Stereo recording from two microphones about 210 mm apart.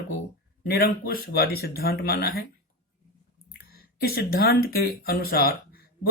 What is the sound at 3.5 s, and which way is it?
Speech, 45° left (ahead or behind).